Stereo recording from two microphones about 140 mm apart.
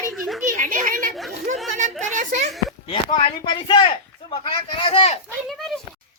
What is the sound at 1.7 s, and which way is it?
Speech, 60° right (ahead or behind).